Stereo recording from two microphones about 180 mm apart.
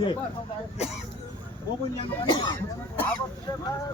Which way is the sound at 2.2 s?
25° left (ahead or behind).